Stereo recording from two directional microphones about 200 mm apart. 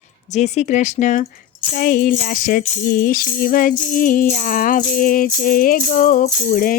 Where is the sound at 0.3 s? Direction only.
35° left (ahead or behind).